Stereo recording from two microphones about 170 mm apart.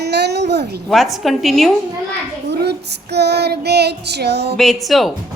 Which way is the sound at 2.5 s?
75° right (ahead or behind).